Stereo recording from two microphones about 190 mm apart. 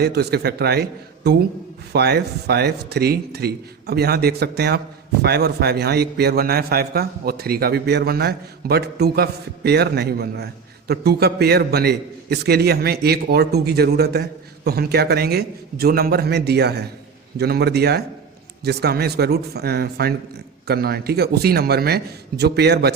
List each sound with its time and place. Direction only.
0.0 s a man's voice: 55° right (ahead or behind)